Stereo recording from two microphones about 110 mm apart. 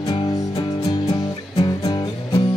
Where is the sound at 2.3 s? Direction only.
55° left (ahead or behind).